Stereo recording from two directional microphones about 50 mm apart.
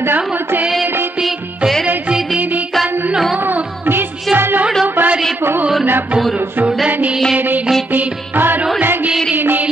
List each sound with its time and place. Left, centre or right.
0.0 s music: right
2.0 s music: centre
4.8 s a sound: right
7.3 s music: right